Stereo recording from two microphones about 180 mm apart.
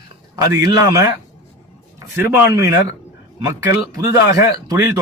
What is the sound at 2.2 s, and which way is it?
Speech, 15° right (ahead or behind).